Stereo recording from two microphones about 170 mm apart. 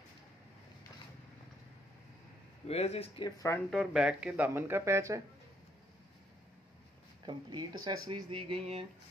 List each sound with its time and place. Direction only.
2.7 s speech: 35° left (ahead or behind)
3.3 s speech: 20° left (ahead or behind)
3.7 s speech: 5° right (ahead or behind)
7.2 s speech: 25° right (ahead or behind)